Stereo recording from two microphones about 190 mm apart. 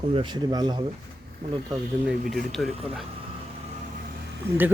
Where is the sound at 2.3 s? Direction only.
Centre (ahead or behind).